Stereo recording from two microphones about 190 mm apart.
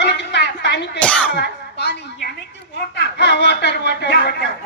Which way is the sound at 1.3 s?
60° left (ahead or behind).